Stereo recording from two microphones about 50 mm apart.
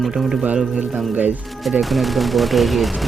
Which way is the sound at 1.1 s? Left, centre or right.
Right.